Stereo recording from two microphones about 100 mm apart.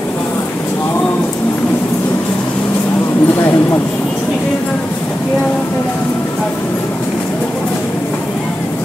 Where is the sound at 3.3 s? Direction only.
25° left (ahead or behind).